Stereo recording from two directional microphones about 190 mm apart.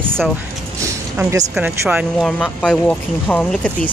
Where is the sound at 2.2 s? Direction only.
5° left (ahead or behind).